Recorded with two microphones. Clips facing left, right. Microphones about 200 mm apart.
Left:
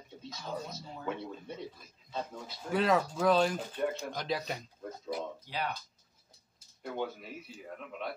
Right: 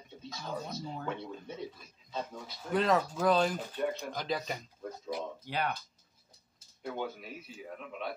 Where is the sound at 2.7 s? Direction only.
Centre (ahead or behind).